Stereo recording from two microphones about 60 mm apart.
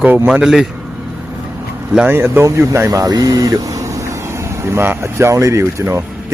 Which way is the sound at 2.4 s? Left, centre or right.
Right.